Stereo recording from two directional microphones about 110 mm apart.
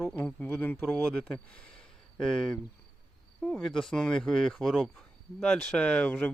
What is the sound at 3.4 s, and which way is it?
Speech, 5° left (ahead or behind).